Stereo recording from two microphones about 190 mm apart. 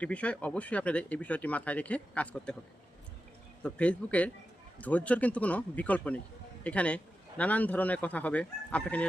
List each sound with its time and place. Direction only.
0.0 s speech: 5° left (ahead or behind)
3.6 s speech: 5° left (ahead or behind)